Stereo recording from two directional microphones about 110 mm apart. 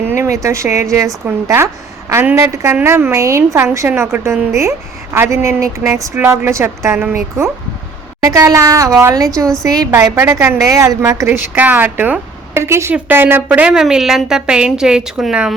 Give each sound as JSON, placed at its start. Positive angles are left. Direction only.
{"t": 0.1, "sound": "a woman's voice", "side_deg": -25}
{"t": 11.5, "sound": "a woman's voice", "side_deg": -15}